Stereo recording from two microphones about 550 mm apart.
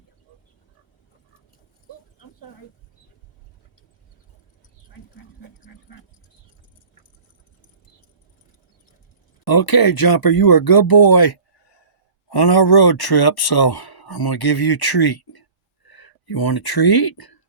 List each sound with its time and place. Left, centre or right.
9.5 s speech: left